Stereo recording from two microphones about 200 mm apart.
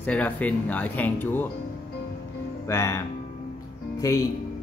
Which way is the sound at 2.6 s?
15° left (ahead or behind).